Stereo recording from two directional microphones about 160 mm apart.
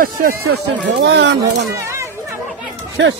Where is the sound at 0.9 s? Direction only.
90° right.